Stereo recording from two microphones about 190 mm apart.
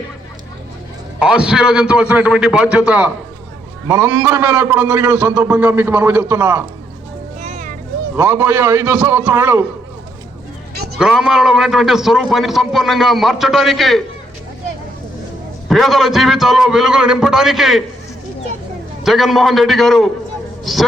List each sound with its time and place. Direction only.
1.2 s a man's voice: 5° right (ahead or behind)
7.4 s music: 40° right (ahead or behind)
8.1 s a man's voice: 10° right (ahead or behind)
10.9 s a man's voice: centre (ahead or behind)
15.7 s a man's voice: centre (ahead or behind)
19.0 s a man's voice: centre (ahead or behind)